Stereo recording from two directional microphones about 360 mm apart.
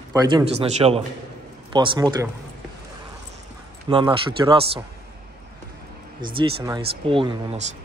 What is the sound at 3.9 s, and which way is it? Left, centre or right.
Speech, centre.